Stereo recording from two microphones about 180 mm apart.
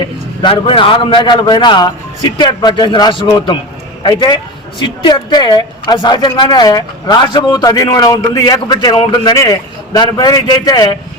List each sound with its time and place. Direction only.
0.0 s a woman's voice: 25° left (ahead or behind)